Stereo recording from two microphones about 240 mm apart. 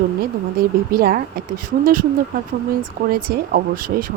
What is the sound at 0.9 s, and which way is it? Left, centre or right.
A woman's voice, right.